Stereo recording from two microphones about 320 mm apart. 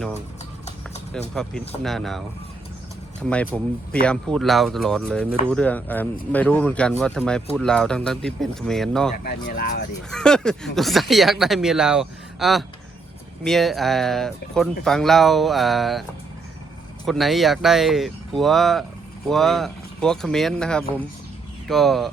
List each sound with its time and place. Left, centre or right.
1.3 s speech: centre
3.2 s speech: centre
9.2 s speech: left
10.1 s speech: centre
17.1 s speech: centre